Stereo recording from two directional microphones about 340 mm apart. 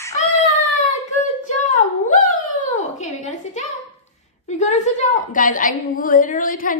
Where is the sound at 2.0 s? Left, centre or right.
Left.